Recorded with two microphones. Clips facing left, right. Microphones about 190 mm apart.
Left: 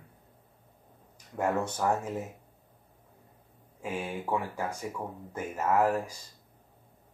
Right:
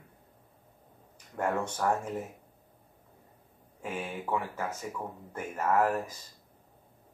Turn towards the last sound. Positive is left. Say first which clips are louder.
# left 1 dB
turn(degrees=10)  # may be behind; listen again after turning